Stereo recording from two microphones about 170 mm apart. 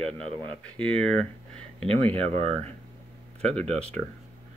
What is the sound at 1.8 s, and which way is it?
Speech, 30° right (ahead or behind).